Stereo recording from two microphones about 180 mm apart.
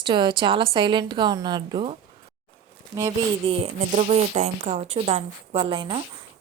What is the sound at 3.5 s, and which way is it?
A woman's voice, 35° right (ahead or behind).